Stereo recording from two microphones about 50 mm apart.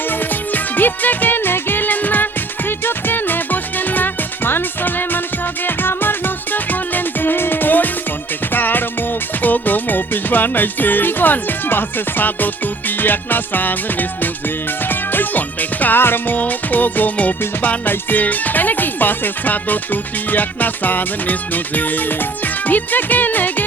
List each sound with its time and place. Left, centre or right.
0.1 s music: left
13.0 s speech: left
14.8 s music: left
16.0 s speech: left